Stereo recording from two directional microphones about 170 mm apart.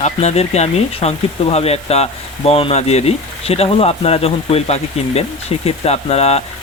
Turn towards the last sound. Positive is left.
turn(degrees=40)  # may be behind; listen again after turning